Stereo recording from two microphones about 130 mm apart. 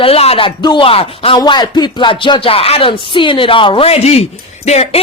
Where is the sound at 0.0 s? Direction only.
50° left (ahead or behind).